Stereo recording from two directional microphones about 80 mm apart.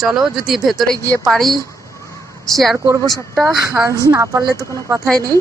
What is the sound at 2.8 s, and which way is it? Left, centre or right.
A woman's voice, right.